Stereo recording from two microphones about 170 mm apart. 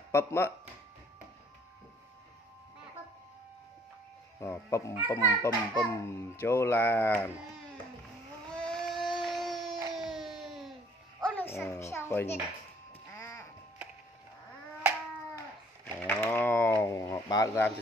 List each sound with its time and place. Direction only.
0.1 s a child's voice: 15° left (ahead or behind)
4.4 s a child's voice: 15° left (ahead or behind)
8.6 s a sound: centre (ahead or behind)
11.2 s a child's voice: 10° left (ahead or behind)
13.1 s music: 15° left (ahead or behind)
15.3 s a sound: 10° left (ahead or behind)